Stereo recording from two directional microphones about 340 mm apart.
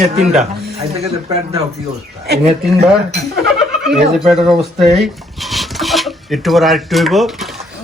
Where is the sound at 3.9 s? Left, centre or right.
Centre.